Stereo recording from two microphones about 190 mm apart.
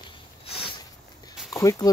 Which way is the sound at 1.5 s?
20° left (ahead or behind).